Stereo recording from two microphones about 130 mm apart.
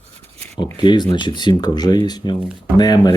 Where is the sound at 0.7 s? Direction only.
35° left (ahead or behind).